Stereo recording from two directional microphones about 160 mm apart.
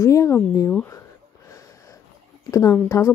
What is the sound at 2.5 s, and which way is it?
Speech, 20° left (ahead or behind).